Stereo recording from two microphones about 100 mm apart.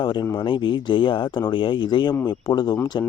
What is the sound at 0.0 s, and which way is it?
Speech, 50° left (ahead or behind).